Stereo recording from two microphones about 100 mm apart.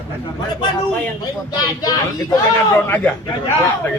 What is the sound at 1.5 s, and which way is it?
Speech, 35° left (ahead or behind).